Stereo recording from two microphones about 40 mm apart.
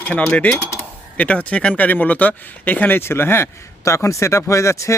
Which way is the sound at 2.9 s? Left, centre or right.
Left.